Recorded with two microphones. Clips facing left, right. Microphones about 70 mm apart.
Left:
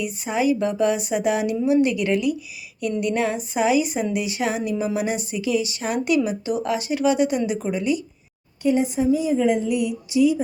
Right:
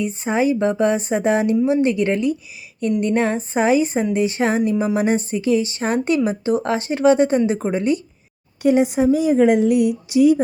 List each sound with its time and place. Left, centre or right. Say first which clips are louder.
0.0 s a woman's voice: right 3 dB; right
8.6 s a woman's voice: right 4 dB; right